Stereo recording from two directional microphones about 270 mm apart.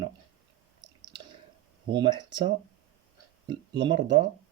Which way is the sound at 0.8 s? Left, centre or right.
Centre.